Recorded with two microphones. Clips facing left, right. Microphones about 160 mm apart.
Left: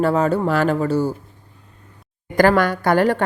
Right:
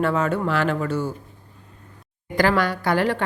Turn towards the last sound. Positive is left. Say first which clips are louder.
# left 5 dB
turn(degrees=45)  # may be behind; listen again after turning